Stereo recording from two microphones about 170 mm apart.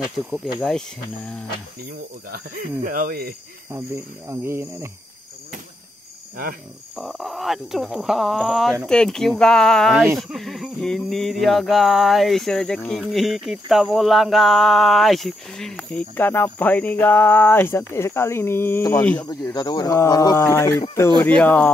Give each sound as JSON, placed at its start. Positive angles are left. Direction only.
{"t": 0.3, "sound": "speech", "side_deg": 0}
{"t": 2.3, "sound": "speech", "side_deg": -55}
{"t": 3.7, "sound": "speech", "side_deg": -15}
{"t": 7.0, "sound": "speech", "side_deg": 0}
{"t": 19.2, "sound": "speech", "side_deg": 25}